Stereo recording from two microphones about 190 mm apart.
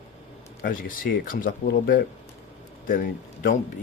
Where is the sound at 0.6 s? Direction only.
45° left (ahead or behind).